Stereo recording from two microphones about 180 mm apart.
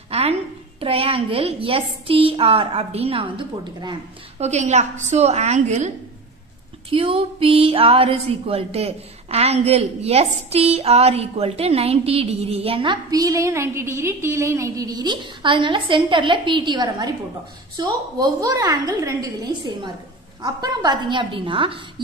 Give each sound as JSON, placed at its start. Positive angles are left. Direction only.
{"t": 0.1, "sound": "speech", "side_deg": -35}
{"t": 4.4, "sound": "speech", "side_deg": -40}
{"t": 6.9, "sound": "a woman's voice", "side_deg": -30}